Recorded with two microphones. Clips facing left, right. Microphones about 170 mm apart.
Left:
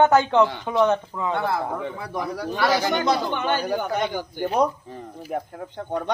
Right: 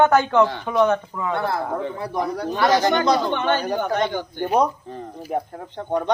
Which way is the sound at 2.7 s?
10° left (ahead or behind).